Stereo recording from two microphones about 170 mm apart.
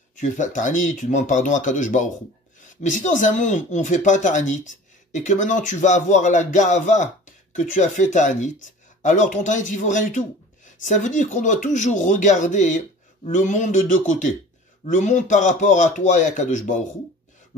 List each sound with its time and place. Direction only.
0.1 s speech: 50° left (ahead or behind)